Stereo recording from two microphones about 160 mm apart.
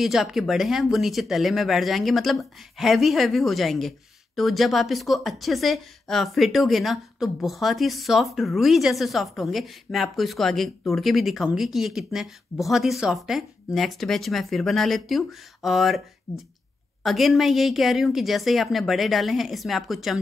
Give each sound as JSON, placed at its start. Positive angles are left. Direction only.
{"t": 0.0, "sound": "a woman's voice", "side_deg": 0}
{"t": 17.0, "sound": "a woman's voice", "side_deg": 0}